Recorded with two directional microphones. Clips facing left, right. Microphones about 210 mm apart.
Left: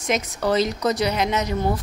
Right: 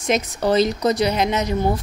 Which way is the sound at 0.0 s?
30° right (ahead or behind).